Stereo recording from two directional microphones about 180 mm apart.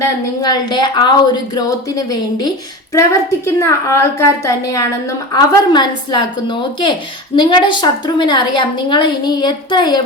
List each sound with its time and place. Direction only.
0.0 s a woman's voice: 20° left (ahead or behind)